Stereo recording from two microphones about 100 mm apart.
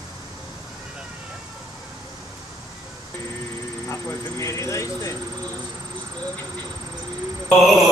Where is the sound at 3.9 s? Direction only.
30° left (ahead or behind).